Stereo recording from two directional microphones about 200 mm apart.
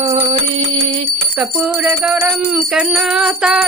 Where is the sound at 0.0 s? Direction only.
30° right (ahead or behind).